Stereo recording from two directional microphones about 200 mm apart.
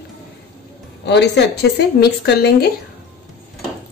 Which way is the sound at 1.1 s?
55° left (ahead or behind).